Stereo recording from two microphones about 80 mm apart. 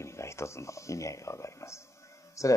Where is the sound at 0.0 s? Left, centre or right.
Left.